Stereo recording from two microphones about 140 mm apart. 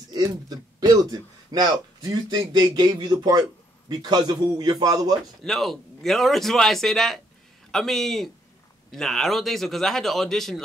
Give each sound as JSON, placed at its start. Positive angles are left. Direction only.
{"t": 0.1, "sound": "a man's voice", "side_deg": -25}
{"t": 5.4, "sound": "a man's voice", "side_deg": 5}